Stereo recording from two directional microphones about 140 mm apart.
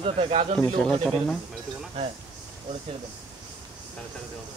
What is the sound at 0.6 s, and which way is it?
Speech, 5° left (ahead or behind).